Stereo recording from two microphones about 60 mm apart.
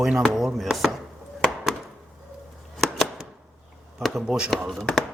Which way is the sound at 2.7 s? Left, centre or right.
Centre.